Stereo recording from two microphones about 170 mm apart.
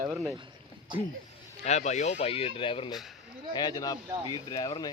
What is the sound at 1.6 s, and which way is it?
Speech, 40° left (ahead or behind).